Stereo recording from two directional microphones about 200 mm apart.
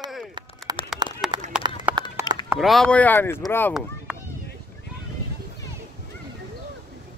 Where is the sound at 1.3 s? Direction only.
20° right (ahead or behind).